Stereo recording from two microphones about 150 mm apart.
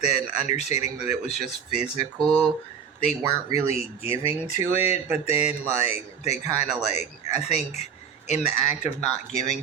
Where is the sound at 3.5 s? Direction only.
40° left (ahead or behind).